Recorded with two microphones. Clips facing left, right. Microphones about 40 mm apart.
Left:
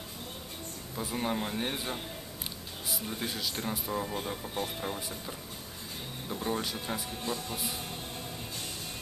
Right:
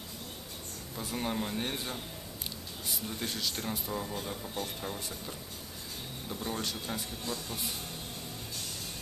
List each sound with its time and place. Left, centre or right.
0.9 s speech: centre
3.1 s speech: centre
6.2 s speech: centre
7.2 s music: left
7.5 s music: centre